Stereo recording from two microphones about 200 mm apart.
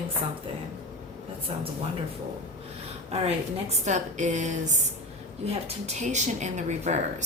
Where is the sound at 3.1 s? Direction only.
30° right (ahead or behind).